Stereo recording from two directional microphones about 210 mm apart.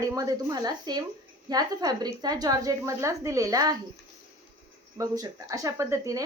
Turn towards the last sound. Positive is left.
turn(degrees=-15)  # may be behind; listen again after turning